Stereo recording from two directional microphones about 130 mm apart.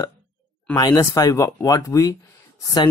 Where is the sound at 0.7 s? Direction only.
30° left (ahead or behind).